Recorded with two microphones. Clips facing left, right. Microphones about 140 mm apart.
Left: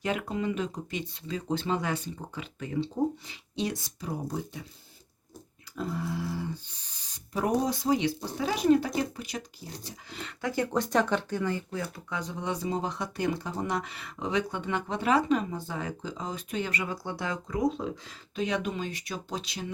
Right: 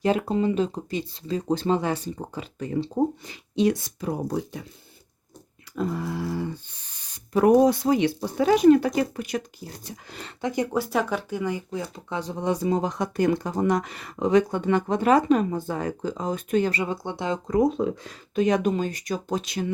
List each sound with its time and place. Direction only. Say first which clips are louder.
0.0 s speech: right 8 dB; 35° right (ahead or behind)
3.2 s speech: right 10 dB; 55° right (ahead or behind)
5.7 s speech: right 5 dB; 60° right (ahead or behind)
10.4 s speech: right 3 dB; 15° right (ahead or behind); by 12.6 s 40° right (ahead or behind)
12.6 s speech: right 7 dB; 55° right (ahead or behind)
16.7 s speech: right 5 dB; 25° right (ahead or behind)
17.5 s speech: right 8 dB; 55° right (ahead or behind)